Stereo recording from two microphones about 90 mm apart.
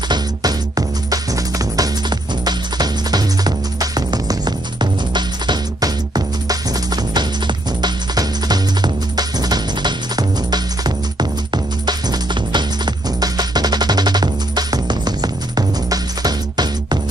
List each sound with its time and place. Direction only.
0.1 s music: 45° right (ahead or behind)